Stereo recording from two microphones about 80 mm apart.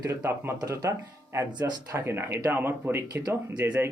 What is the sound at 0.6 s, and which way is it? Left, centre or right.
Speech, right.